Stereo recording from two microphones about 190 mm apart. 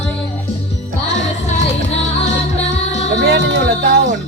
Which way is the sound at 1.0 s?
35° left (ahead or behind).